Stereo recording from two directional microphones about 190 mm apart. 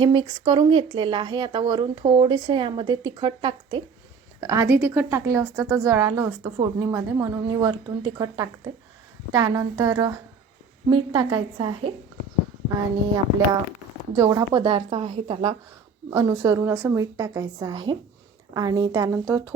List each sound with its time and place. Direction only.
0.0 s a woman's voice: 25° right (ahead or behind)
14.2 s a woman's voice: 20° right (ahead or behind)
16.0 s a woman's voice: 20° right (ahead or behind)